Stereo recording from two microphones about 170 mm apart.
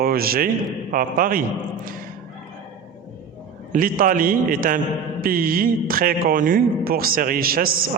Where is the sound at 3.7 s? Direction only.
55° right (ahead or behind).